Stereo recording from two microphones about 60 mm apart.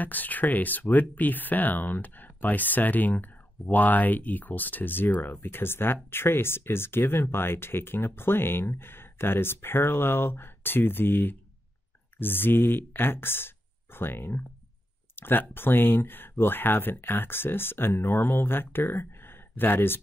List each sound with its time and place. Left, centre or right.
0.0 s speech: left